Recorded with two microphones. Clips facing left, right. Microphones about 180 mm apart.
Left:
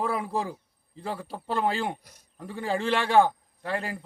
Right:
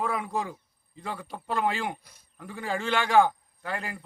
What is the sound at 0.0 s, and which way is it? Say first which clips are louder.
A man's voice: left 1 dB; 30° left (ahead or behind).